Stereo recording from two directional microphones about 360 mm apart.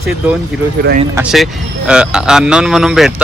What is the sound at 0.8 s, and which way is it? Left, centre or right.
Speech, right.